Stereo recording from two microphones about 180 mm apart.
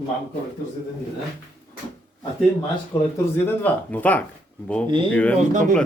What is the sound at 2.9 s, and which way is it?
Speech, 25° left (ahead or behind).